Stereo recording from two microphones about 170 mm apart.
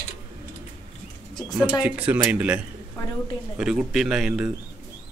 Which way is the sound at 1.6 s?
10° right (ahead or behind).